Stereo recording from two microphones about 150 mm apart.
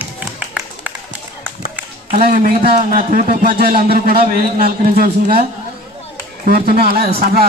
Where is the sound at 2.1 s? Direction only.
75° right (ahead or behind).